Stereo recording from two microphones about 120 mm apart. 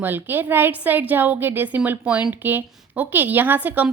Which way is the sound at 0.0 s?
15° right (ahead or behind).